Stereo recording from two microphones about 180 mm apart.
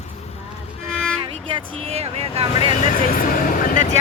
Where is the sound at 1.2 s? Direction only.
30° right (ahead or behind).